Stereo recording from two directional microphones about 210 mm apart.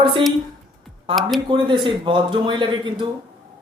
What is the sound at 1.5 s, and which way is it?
Speech, 25° right (ahead or behind).